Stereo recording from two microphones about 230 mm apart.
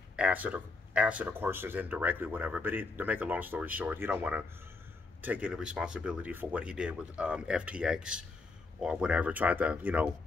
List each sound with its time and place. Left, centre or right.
0.1 s speech: centre